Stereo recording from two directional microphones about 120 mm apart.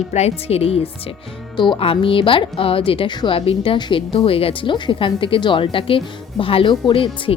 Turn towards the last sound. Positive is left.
turn(degrees=45)  # may be behind; listen again after turning